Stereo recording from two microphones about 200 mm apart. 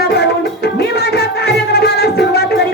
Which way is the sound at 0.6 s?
55° left (ahead or behind).